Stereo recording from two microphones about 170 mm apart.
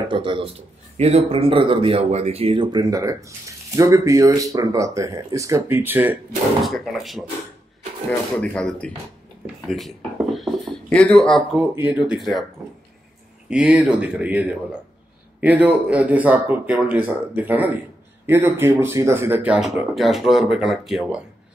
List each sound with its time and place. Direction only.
0.1 s speech: 30° right (ahead or behind); by 6.1 s 10° right (ahead or behind)
6.6 s speech: centre (ahead or behind)
8.4 s speech: 5° left (ahead or behind)
11.5 s speech: 10° right (ahead or behind)
13.5 s speech: 5° right (ahead or behind)